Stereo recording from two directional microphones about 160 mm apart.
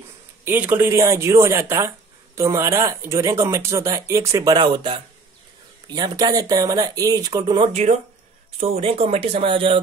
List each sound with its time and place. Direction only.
0.5 s speech: 15° right (ahead or behind)
4.6 s speech: 30° right (ahead or behind)